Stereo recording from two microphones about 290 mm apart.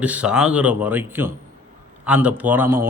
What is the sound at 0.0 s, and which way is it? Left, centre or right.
A man's voice, centre.